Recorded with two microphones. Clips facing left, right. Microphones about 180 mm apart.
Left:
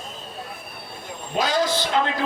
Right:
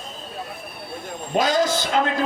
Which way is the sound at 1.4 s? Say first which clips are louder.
Right 2 dB; 45° right (ahead or behind).